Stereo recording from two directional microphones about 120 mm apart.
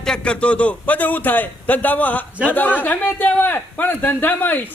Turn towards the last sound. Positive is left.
turn(degrees=15)  # may be behind; listen again after turning